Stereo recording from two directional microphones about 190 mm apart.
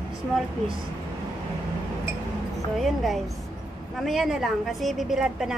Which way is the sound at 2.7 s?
Centre (ahead or behind).